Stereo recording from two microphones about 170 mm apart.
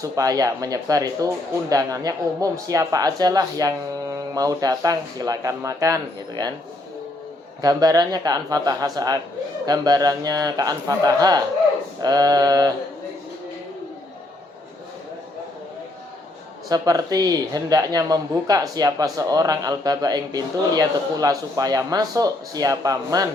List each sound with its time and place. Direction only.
0.0 s speech: 20° right (ahead or behind)
7.6 s speech: 20° right (ahead or behind)
16.6 s speech: 20° right (ahead or behind)